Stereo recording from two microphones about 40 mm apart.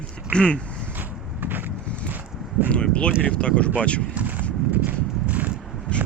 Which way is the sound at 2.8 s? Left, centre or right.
Left.